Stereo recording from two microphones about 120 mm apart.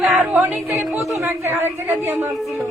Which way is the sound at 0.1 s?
15° right (ahead or behind).